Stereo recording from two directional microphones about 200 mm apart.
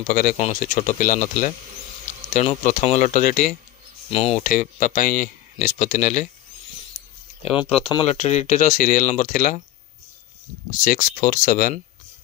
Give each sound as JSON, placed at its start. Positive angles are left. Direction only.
{"t": 0.1, "sound": "speech", "side_deg": 40}
{"t": 4.1, "sound": "speech", "side_deg": 30}
{"t": 4.4, "sound": "speech", "side_deg": 40}
{"t": 7.5, "sound": "speech", "side_deg": 25}
{"t": 10.8, "sound": "speech", "side_deg": 40}